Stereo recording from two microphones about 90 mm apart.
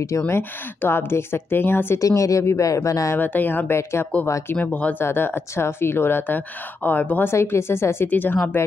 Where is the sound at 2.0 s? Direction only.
40° left (ahead or behind).